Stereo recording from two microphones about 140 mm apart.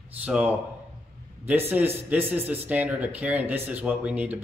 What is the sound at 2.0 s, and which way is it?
Speech, 15° right (ahead or behind).